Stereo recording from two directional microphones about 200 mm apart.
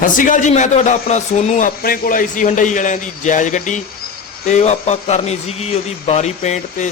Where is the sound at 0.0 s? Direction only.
40° left (ahead or behind).